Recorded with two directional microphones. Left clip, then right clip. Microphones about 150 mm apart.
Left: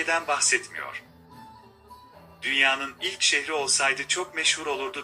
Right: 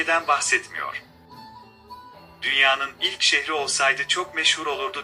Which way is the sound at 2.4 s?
55° right (ahead or behind).